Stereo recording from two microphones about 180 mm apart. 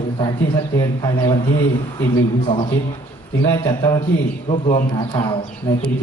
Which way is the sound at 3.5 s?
25° left (ahead or behind).